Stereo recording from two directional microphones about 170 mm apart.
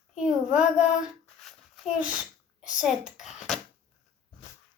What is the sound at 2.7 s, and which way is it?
Speech, 5° right (ahead or behind).